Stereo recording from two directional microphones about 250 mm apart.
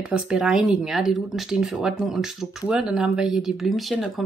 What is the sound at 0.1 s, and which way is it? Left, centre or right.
A woman's voice, centre.